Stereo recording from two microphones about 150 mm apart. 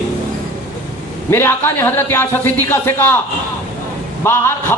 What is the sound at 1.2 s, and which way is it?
A man's voice, 15° left (ahead or behind).